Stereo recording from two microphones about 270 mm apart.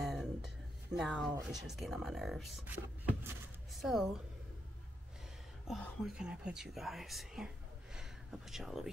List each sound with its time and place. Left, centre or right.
0.0 s music: centre
0.9 s speech: centre
5.7 s speech: centre